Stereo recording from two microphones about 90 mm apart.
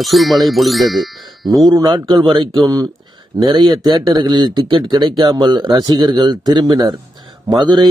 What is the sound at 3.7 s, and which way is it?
Speech, 50° right (ahead or behind).